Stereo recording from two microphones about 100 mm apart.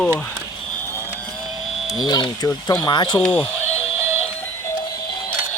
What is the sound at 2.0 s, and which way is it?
Speech, 45° left (ahead or behind).